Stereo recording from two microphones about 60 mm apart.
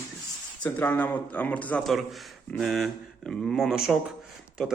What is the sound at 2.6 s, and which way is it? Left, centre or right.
Speech, centre.